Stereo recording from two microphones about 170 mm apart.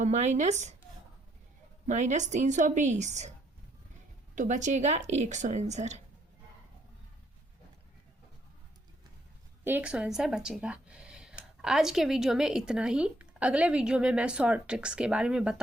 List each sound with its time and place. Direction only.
0.0 s a woman's voice: 40° right (ahead or behind)
1.9 s a woman's voice: 45° right (ahead or behind)
4.4 s a woman's voice: 45° right (ahead or behind)
9.6 s speech: 10° right (ahead or behind)